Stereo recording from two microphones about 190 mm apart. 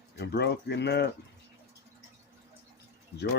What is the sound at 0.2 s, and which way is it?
Speech, 60° left (ahead or behind).